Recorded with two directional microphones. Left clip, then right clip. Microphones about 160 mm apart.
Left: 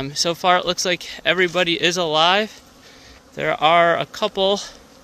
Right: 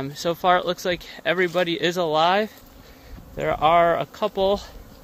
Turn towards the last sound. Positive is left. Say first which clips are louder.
# left 2 dB
turn(degrees=20)  # may be behind; listen again after turning